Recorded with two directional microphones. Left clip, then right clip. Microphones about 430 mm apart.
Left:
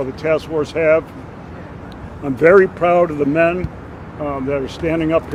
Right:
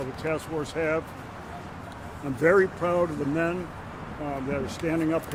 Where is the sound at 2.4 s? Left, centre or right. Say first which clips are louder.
Left 11 dB; left.